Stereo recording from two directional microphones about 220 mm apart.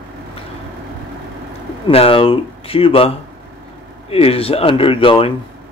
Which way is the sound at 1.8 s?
25° left (ahead or behind).